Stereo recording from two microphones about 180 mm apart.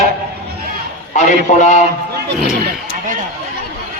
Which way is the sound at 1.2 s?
40° left (ahead or behind).